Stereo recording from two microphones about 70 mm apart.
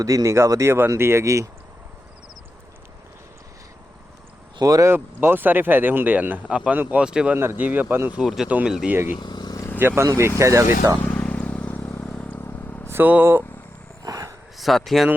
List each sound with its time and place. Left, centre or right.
0.0 s speech: right
4.6 s speech: right
4.9 s speech: right
7.0 s speech: centre
7.3 s speech: right
7.6 s speech: right
8.2 s speech: centre
9.2 s vehicle: left
9.7 s speech: right
11.1 s vehicle: centre
12.9 s speech: right
14.0 s a sound: right
14.6 s speech: centre